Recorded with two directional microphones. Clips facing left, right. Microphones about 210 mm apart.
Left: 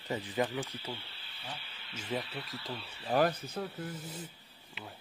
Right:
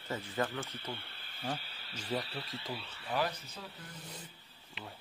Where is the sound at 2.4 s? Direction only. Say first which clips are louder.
Even; 20° right (ahead or behind).